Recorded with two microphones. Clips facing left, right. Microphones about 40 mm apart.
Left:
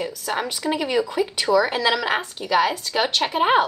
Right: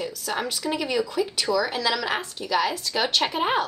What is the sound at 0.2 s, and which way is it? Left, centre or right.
Speech, centre.